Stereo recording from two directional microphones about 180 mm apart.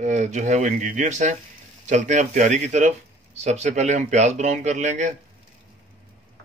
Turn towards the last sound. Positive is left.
turn(degrees=-40)  # may be behind; listen again after turning